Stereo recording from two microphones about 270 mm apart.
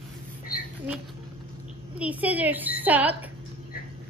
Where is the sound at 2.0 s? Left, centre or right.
Centre.